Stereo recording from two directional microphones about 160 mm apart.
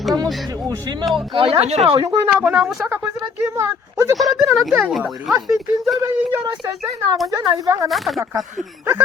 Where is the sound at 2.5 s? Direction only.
Centre (ahead or behind).